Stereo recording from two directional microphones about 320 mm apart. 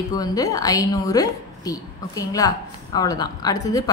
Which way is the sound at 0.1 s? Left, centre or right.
Centre.